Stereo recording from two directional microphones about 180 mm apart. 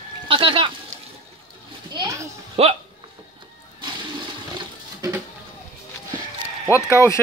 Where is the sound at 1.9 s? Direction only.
20° right (ahead or behind).